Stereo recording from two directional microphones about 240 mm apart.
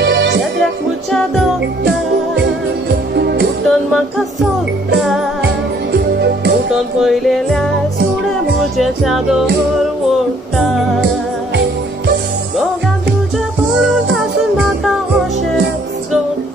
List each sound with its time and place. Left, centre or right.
0.0 s music: right
1.1 s music: centre
2.9 s music: right
3.6 s music: centre
5.4 s music: right
6.7 s music: centre
8.7 s music: centre